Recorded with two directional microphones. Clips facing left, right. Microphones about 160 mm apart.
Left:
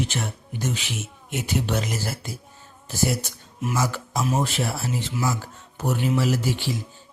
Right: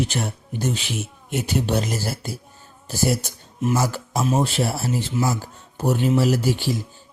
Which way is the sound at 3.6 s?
30° right (ahead or behind).